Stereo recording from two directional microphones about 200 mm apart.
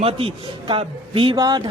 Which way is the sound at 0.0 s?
30° right (ahead or behind).